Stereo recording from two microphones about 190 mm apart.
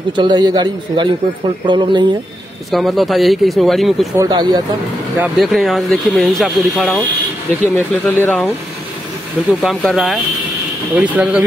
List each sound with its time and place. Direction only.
0.1 s a man's voice: 25° right (ahead or behind)
2.7 s speech: centre (ahead or behind)
4.2 s a man's voice: 20° right (ahead or behind)
5.2 s speech: centre (ahead or behind)